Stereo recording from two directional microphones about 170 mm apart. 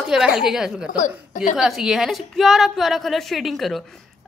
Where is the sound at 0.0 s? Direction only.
5° right (ahead or behind).